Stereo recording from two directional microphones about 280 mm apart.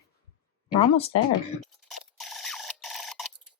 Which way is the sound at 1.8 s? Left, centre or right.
Centre.